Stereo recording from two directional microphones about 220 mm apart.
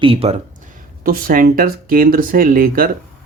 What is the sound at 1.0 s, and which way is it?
Speech, 40° right (ahead or behind).